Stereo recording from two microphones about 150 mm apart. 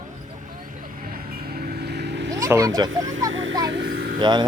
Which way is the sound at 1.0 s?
85° right.